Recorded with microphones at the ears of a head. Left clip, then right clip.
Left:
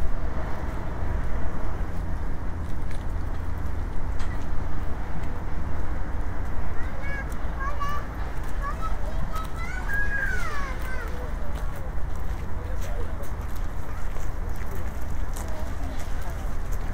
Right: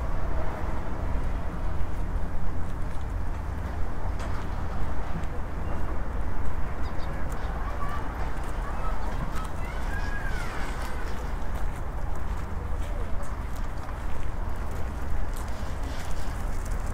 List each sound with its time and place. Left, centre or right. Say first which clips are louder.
9.8 s cat: left 11 dB; left